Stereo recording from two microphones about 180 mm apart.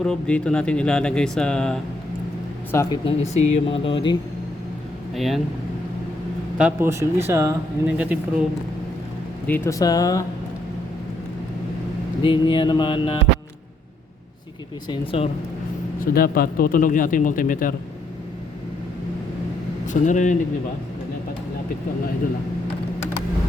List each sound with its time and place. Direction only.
0.0 s speech: 5° left (ahead or behind)
2.7 s a sound: 25° left (ahead or behind)
3.2 s speech: 40° left (ahead or behind)
5.1 s speech: centre (ahead or behind)
6.6 s speech: 10° right (ahead or behind)
9.5 s a sound: 15° left (ahead or behind)
12.2 s a sound: 30° left (ahead or behind)
14.8 s speech: 30° left (ahead or behind)
16.0 s speech: 55° left (ahead or behind)
19.9 s speech: 45° left (ahead or behind)